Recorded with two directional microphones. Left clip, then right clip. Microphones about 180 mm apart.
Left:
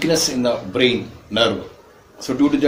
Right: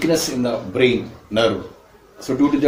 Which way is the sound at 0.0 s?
20° left (ahead or behind).